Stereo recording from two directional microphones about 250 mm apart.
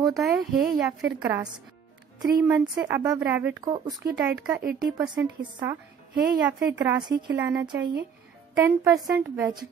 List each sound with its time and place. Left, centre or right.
0.2 s speech: centre
7.0 s speech: centre